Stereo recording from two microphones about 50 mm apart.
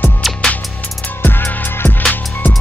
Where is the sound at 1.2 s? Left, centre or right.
Left.